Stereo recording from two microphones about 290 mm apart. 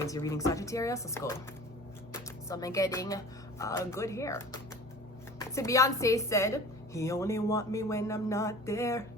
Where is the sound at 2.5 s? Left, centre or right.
Centre.